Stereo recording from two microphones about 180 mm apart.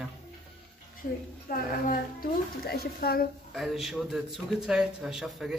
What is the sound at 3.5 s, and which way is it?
A man's voice, centre (ahead or behind).